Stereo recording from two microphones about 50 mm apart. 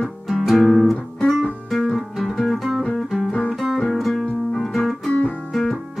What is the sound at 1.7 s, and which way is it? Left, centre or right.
Guitar, centre.